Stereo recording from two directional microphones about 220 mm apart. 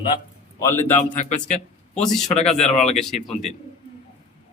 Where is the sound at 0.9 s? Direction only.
30° left (ahead or behind).